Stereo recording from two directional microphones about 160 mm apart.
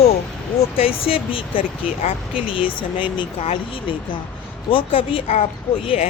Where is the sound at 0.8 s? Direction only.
35° left (ahead or behind).